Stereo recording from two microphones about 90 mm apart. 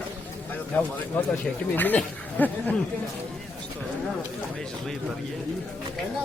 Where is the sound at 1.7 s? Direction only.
20° left (ahead or behind).